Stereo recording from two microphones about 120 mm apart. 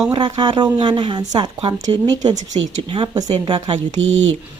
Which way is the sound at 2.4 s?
80° right.